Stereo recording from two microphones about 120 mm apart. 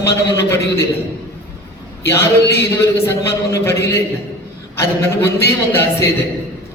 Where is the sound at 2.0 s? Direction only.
20° left (ahead or behind).